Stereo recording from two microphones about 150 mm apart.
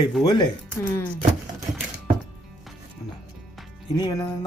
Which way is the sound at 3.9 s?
25° left (ahead or behind).